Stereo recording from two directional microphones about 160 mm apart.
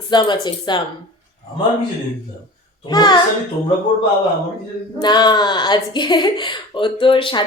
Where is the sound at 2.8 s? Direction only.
25° left (ahead or behind).